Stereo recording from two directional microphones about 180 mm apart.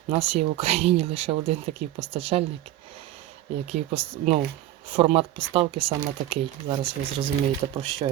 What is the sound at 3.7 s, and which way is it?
Speech, 35° right (ahead or behind).